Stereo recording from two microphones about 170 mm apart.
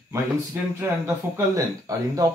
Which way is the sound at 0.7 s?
15° right (ahead or behind).